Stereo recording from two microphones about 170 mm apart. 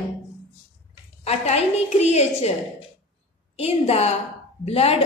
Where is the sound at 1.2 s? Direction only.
40° left (ahead or behind).